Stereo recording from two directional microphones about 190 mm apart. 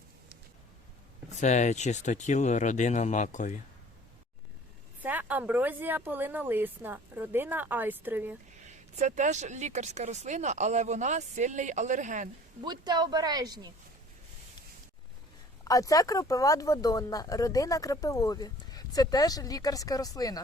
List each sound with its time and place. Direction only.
1.4 s speech: 40° left (ahead or behind)
4.9 s a woman's voice: 10° right (ahead or behind)
8.6 s speech: 40° right (ahead or behind)
12.6 s speech: 20° right (ahead or behind)
15.6 s speech: 20° left (ahead or behind)